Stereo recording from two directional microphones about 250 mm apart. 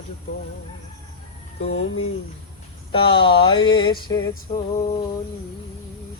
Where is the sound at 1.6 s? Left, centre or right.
Left.